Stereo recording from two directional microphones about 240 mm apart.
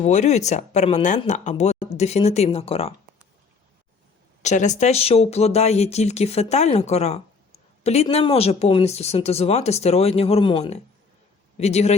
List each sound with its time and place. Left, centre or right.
0.0 s speech: left
4.4 s speech: left